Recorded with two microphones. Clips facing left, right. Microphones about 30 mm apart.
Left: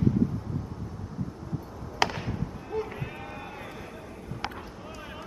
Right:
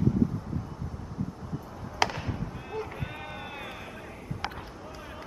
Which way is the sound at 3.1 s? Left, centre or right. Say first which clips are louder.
Even; centre.